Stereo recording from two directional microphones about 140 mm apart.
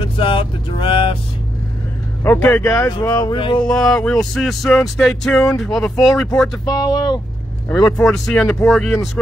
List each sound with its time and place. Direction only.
0.2 s speech: 40° left (ahead or behind)
2.2 s speech: 15° left (ahead or behind)
3.3 s speech: 35° left (ahead or behind)
3.6 s a sound: 5° left (ahead or behind)
6.6 s speech: 25° left (ahead or behind)
7.8 s a sound: 5° left (ahead or behind)